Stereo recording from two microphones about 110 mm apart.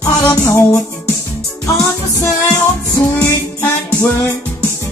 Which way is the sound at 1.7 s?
25° left (ahead or behind).